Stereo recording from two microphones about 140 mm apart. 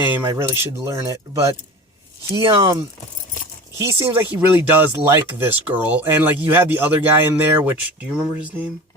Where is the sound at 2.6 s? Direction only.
25° right (ahead or behind).